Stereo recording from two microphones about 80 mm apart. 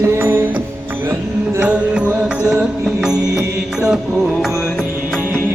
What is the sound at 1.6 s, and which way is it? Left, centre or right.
Music, centre.